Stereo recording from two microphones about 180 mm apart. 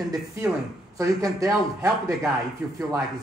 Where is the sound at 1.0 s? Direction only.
20° right (ahead or behind).